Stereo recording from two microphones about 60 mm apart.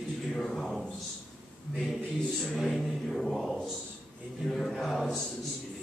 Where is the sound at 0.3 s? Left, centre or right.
Centre.